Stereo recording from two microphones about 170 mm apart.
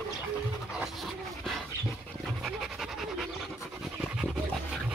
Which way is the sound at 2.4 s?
Centre (ahead or behind).